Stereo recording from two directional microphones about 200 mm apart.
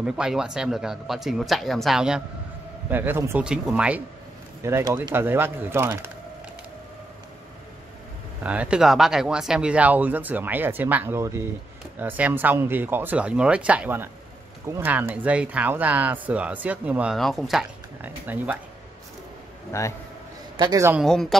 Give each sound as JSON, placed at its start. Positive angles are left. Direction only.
{"t": 0.0, "sound": "speech", "side_deg": -5}
{"t": 8.5, "sound": "speech", "side_deg": -5}
{"t": 19.7, "sound": "a man's voice", "side_deg": 15}
{"t": 20.5, "sound": "speech", "side_deg": -15}
{"t": 21.0, "sound": "speech", "side_deg": 0}